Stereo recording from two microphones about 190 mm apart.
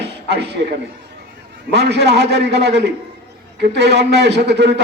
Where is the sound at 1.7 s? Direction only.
60° right (ahead or behind).